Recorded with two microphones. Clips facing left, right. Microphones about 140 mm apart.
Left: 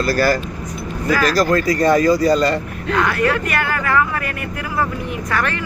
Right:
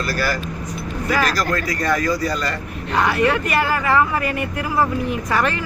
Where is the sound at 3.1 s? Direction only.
25° right (ahead or behind).